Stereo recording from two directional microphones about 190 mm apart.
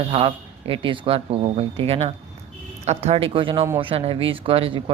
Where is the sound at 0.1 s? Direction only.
30° right (ahead or behind).